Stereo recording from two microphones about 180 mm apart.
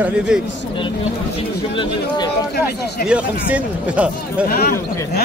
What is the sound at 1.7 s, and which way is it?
Speech, 25° left (ahead or behind).